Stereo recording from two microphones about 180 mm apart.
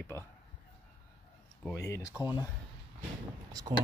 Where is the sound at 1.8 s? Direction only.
15° left (ahead or behind).